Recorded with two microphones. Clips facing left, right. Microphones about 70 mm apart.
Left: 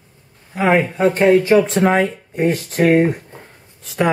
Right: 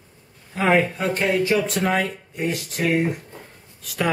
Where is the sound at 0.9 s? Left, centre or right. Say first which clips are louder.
Left 9 dB; left.